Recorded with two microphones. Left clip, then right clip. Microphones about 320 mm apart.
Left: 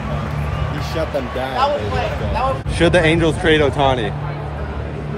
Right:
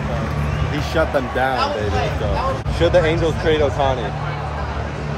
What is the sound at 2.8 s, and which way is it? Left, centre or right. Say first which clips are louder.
Speech: left 2 dB; left.